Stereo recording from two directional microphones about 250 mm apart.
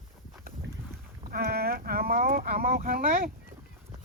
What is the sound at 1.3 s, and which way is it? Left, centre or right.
Speech, right.